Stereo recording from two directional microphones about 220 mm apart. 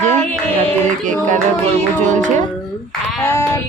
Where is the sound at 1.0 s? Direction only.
35° right (ahead or behind).